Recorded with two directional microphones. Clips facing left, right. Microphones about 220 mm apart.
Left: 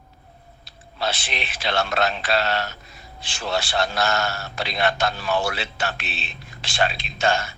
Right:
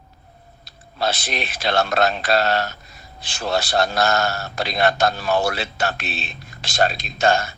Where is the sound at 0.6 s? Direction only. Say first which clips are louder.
Right 3 dB; 40° right (ahead or behind).